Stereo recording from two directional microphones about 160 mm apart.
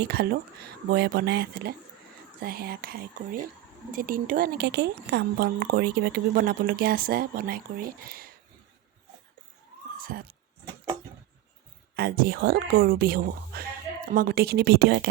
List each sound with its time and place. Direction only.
0.0 s speech: 90° right
2.4 s speech: 70° right (ahead or behind)
10.0 s speech: 65° right (ahead or behind)
11.9 s speech: 75° right (ahead or behind); by 15.0 s 90° right